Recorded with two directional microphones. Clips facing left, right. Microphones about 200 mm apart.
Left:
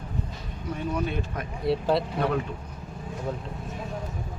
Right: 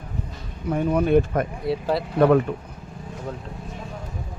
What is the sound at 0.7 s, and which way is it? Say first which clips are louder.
Speech: right 10 dB; 55° right (ahead or behind).